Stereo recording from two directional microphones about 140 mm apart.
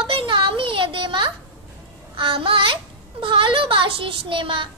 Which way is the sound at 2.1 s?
40° right (ahead or behind).